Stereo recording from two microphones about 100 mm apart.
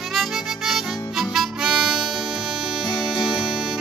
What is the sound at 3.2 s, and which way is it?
Music, 10° right (ahead or behind).